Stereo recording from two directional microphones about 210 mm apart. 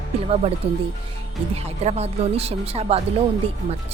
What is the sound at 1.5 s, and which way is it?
Speech, 30° right (ahead or behind).